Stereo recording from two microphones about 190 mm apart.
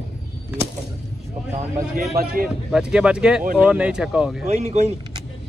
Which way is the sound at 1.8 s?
50° right (ahead or behind).